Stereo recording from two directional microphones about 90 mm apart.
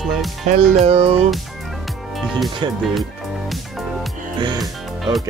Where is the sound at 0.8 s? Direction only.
90° right.